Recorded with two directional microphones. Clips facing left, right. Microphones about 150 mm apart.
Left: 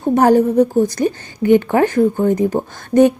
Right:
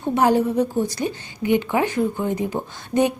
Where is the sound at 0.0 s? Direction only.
45° left (ahead or behind).